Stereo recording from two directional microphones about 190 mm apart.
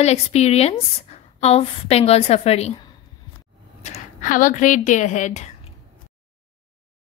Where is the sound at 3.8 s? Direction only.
40° left (ahead or behind).